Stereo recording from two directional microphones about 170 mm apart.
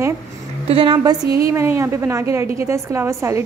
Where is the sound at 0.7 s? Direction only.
30° right (ahead or behind).